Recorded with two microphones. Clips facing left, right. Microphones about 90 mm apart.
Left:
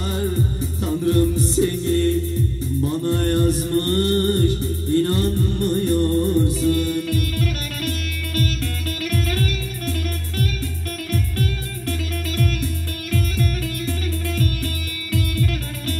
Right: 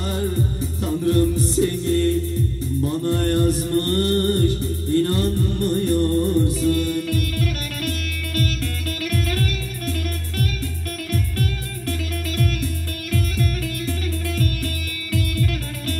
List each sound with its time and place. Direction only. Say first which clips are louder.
1.0 s music: even; 20° left (ahead or behind)
3.1 s music: even; 20° left (ahead or behind)